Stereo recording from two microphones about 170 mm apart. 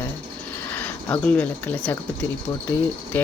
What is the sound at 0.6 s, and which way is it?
Speech, 10° left (ahead or behind).